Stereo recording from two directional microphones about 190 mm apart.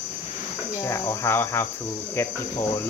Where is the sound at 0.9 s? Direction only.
15° left (ahead or behind).